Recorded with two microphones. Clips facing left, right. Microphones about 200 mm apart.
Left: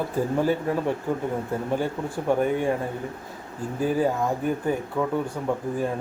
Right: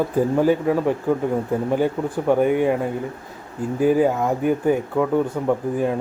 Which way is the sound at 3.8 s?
15° right (ahead or behind).